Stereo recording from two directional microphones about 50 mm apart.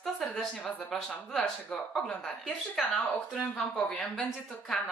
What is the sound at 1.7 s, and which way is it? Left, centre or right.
Speech, centre.